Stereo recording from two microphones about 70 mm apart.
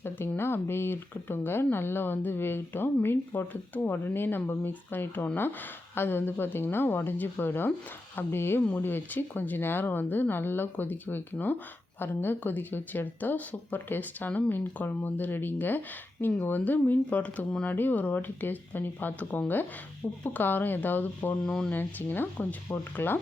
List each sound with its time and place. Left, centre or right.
0.3 s speech: left
21.4 s speech: centre
21.7 s speech: left